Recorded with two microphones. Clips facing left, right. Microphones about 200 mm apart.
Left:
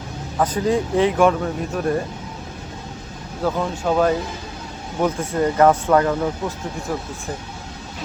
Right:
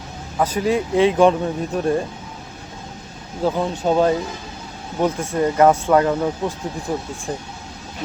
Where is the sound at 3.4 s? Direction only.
15° right (ahead or behind).